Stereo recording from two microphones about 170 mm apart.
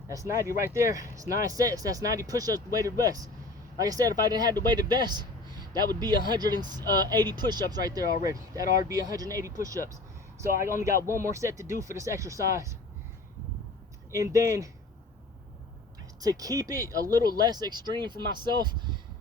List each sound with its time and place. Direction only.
0.1 s speech: 20° right (ahead or behind)
5.0 s a sound: 25° right (ahead or behind)
6.2 s speech: 25° right (ahead or behind)
14.1 s speech: 20° right (ahead or behind)
16.2 s speech: 20° right (ahead or behind)